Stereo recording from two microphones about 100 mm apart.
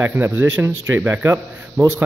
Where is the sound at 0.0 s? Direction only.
20° right (ahead or behind).